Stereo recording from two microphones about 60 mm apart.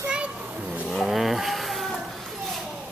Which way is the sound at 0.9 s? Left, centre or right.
Centre.